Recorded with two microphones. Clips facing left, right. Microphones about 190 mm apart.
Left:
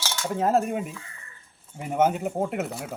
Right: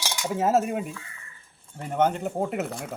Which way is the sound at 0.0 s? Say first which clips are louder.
Even; 15° right (ahead or behind).